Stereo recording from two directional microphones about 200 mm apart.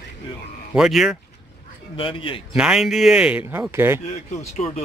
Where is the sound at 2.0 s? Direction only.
25° left (ahead or behind).